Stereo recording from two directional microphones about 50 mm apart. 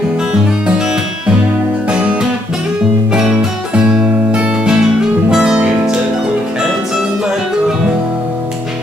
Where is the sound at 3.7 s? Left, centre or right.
Centre.